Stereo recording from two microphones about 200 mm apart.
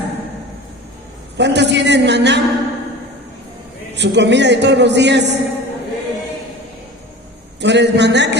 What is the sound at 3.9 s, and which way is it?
A man's voice, 60° right (ahead or behind).